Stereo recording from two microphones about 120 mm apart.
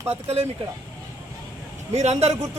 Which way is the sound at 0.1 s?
60° right (ahead or behind).